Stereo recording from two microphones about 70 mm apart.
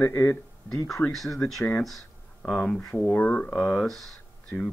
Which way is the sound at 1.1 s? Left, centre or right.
Centre.